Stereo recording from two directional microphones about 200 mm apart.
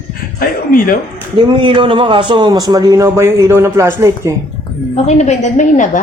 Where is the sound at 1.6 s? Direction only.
25° right (ahead or behind).